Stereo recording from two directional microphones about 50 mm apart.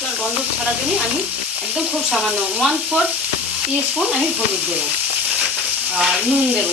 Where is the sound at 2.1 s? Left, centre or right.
Centre.